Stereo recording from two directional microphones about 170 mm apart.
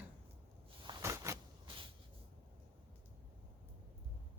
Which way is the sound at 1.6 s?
30° right (ahead or behind).